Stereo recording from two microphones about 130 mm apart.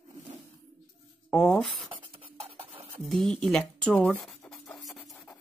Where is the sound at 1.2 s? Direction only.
5° left (ahead or behind).